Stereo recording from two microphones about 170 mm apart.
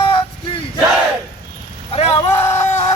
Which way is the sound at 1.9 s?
35° left (ahead or behind).